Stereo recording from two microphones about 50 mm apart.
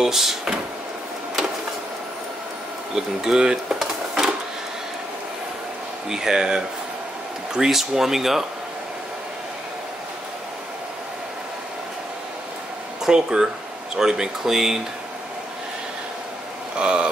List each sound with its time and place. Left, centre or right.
0.0 s speech: centre
2.9 s speech: centre
3.8 s sewing machine: centre
6.0 s speech: centre
13.0 s speech: centre
16.7 s a sound: centre